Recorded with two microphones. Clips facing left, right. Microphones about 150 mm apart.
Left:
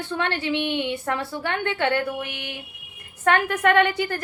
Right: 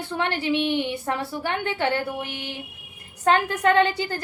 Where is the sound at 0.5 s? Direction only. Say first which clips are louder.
Right 3 dB; 20° left (ahead or behind).